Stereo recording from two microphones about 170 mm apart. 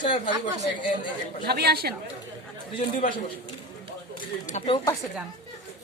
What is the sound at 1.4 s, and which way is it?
Speech, 70° right (ahead or behind).